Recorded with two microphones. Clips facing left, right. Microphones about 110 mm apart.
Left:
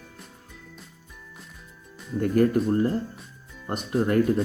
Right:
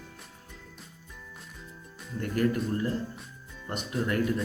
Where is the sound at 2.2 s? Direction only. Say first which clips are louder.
Left 7 dB; 40° left (ahead or behind).